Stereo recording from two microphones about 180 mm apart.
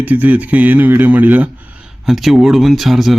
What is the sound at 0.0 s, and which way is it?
Speech, 10° right (ahead or behind).